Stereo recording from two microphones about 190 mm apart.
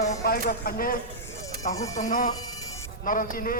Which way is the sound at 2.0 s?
45° left (ahead or behind).